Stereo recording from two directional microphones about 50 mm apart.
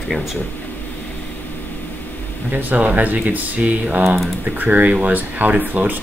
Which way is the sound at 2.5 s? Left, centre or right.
Right.